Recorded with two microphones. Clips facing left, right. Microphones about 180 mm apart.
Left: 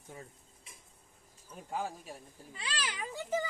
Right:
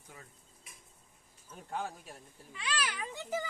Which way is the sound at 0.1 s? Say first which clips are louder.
Left 6 dB; 25° left (ahead or behind).